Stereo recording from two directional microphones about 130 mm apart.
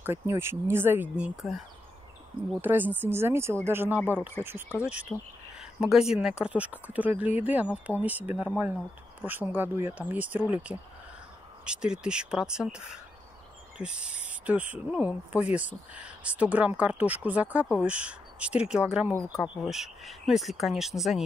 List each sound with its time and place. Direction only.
0.0 s speech: 20° right (ahead or behind); by 1.6 s 5° right (ahead or behind)
2.6 s speech: 15° right (ahead or behind)
5.1 s speech: 5° left (ahead or behind)
5.6 s speech: 5° right (ahead or behind)